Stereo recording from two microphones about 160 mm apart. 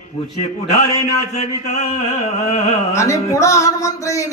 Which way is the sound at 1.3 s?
45° left (ahead or behind).